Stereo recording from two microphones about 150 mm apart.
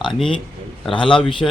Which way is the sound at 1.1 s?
5° left (ahead or behind).